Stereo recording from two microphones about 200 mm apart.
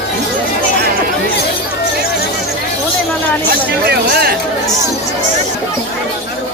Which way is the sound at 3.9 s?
50° right (ahead or behind).